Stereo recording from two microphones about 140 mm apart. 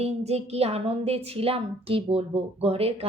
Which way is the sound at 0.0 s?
50° right (ahead or behind).